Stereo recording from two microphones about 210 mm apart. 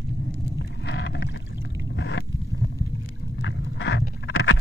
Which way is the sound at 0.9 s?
60° left (ahead or behind).